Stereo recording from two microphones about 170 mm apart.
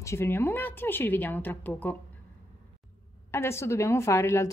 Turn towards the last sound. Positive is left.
turn(degrees=15)  # may be behind; listen again after turning